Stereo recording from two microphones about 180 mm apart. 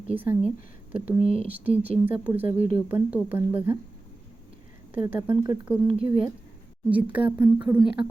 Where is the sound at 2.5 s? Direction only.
45° left (ahead or behind).